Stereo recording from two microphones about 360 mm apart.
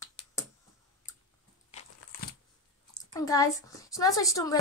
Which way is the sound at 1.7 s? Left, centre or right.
Centre.